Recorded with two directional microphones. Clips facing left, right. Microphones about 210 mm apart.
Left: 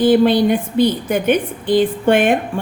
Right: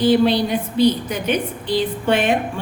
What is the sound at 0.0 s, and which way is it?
A woman's voice, 50° left (ahead or behind).